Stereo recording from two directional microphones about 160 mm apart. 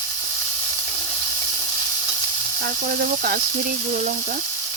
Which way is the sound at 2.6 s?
65° right (ahead or behind).